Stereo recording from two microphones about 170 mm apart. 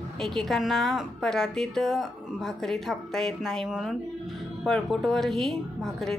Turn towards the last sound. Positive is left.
turn(degrees=0)  # may be behind; listen again after turning